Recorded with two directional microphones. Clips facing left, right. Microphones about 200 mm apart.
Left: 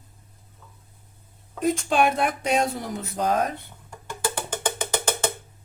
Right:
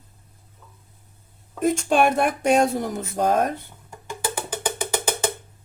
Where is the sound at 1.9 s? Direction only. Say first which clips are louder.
Right 3 dB; 50° right (ahead or behind).